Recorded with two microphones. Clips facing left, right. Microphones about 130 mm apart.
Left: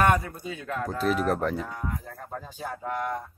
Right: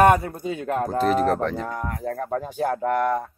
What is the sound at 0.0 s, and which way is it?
A man's voice, 40° right (ahead or behind).